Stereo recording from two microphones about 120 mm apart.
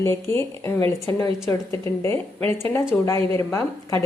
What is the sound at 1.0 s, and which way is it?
Speech, 35° left (ahead or behind).